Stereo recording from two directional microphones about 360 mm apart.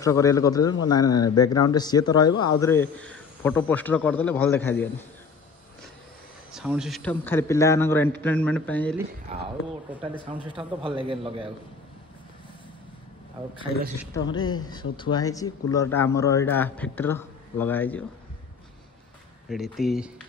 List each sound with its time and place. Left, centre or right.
0.0 s speech: centre
6.5 s a man's voice: centre
9.3 s a man's voice: centre
10.5 s a man's voice: centre
13.4 s a man's voice: centre
14.1 s a man's voice: centre
19.5 s a man's voice: centre